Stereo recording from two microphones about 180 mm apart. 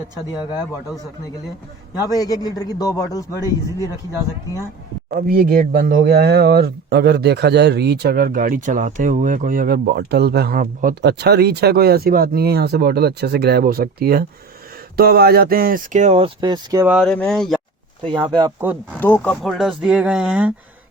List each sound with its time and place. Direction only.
2.0 s a man's voice: 20° left (ahead or behind)
5.1 s speech: 55° right (ahead or behind); by 16.8 s 25° right (ahead or behind)
16.8 s speech: centre (ahead or behind)
18.0 s speech: 25° right (ahead or behind)
18.9 s speech: 10° left (ahead or behind)
19.4 s speech: centre (ahead or behind)